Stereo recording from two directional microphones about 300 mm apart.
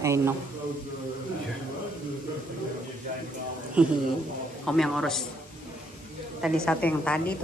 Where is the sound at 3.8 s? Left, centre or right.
Centre.